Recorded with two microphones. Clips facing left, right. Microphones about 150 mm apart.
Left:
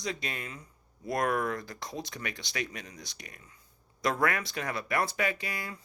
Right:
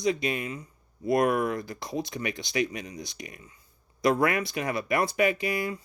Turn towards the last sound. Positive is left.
turn(degrees=-15)  # may be behind; listen again after turning